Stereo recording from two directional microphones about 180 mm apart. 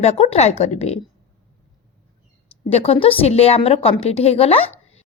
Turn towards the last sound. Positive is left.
turn(degrees=35)  # may be behind; listen again after turning